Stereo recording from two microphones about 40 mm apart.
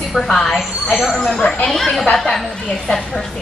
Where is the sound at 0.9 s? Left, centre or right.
Centre.